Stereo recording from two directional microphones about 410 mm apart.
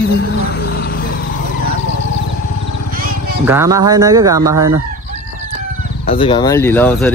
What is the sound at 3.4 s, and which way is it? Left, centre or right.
Speech, centre.